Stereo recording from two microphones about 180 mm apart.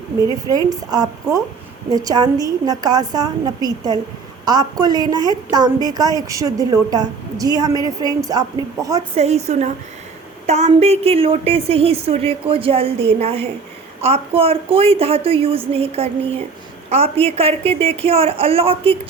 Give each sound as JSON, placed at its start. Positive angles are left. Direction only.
{"t": 0.2, "sound": "a woman's voice", "side_deg": -20}
{"t": 9.1, "sound": "a woman's voice", "side_deg": -35}